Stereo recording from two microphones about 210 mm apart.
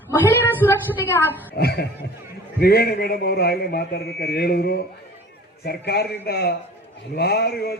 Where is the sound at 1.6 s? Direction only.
50° left (ahead or behind).